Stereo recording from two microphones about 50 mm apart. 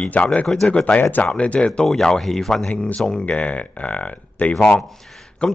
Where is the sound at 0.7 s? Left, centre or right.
Left.